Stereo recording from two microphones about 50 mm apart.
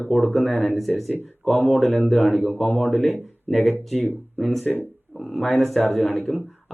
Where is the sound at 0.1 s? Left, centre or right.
Centre.